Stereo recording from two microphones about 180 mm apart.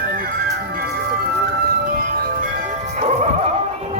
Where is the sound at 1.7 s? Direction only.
55° right (ahead or behind).